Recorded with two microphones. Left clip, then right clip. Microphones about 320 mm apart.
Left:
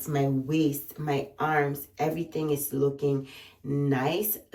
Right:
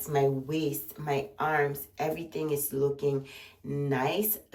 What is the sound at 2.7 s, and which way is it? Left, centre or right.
Speech, right.